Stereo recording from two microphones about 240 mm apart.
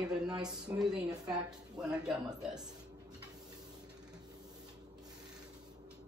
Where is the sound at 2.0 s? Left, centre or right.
Centre.